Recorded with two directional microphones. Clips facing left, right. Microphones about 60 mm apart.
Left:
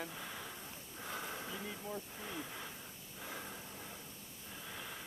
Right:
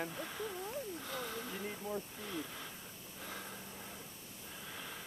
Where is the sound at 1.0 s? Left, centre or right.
Centre.